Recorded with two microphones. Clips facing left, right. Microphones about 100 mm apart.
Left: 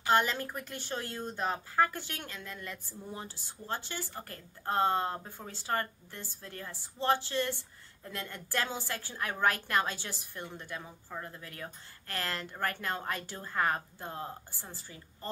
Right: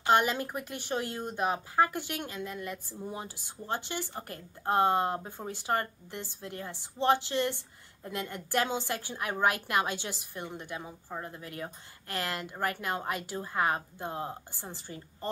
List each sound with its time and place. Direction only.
0.0 s a woman's voice: 15° right (ahead or behind)